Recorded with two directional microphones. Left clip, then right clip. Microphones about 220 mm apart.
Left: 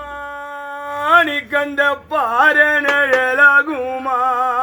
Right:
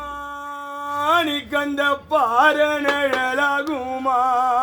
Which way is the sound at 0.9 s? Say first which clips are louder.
Left 6 dB; 40° right (ahead or behind).